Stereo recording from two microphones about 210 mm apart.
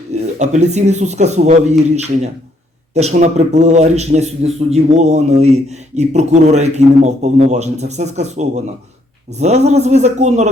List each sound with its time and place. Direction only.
0.1 s a man's voice: 35° right (ahead or behind)